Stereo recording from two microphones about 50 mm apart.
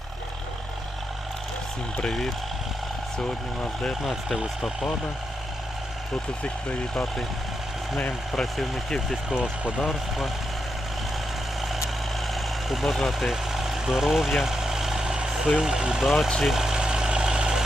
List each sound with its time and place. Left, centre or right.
2.0 s speech: centre
4.0 s speech: centre
6.4 s speech: left
8.4 s speech: centre
9.3 s speech: centre
9.8 s speech: centre
12.3 s vehicle: centre
16.0 s speech: centre
16.4 s engine: centre